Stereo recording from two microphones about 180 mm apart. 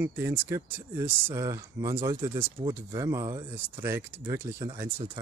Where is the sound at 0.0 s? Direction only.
10° right (ahead or behind).